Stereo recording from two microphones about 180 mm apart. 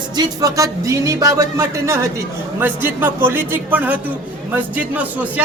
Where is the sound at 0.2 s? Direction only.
20° right (ahead or behind).